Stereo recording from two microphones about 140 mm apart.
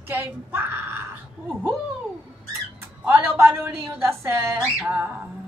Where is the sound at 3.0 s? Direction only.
15° right (ahead or behind).